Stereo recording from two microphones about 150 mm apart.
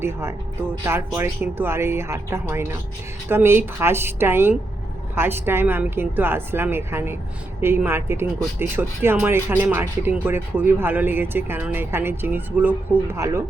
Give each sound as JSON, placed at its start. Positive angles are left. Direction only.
{"t": 0.0, "sound": "speech", "side_deg": -15}